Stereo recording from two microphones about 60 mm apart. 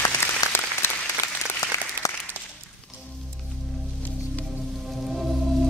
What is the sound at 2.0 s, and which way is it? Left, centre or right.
Applause, right.